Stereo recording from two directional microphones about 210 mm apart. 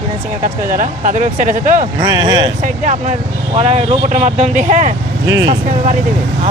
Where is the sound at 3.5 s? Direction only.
30° right (ahead or behind).